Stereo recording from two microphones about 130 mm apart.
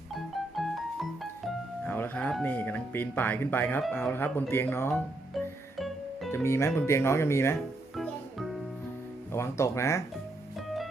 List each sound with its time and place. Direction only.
0.1 s music: centre (ahead or behind)
1.8 s music: 15° left (ahead or behind)
2.4 s speech: 15° left (ahead or behind)
5.3 s music: centre (ahead or behind)
6.3 s speech: 20° left (ahead or behind)
7.9 s music: centre (ahead or behind)
9.3 s speech: 20° left (ahead or behind)